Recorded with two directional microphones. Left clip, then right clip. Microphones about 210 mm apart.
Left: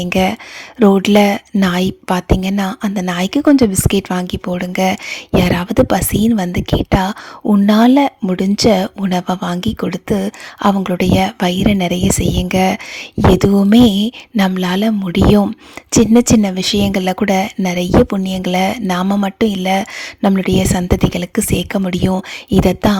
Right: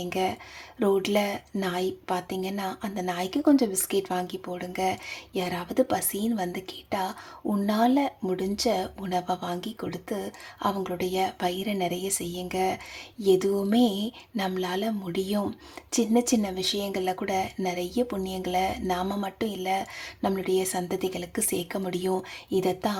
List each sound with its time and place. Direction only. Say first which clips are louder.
0.0 s speech: left 12 dB; 35° left (ahead or behind)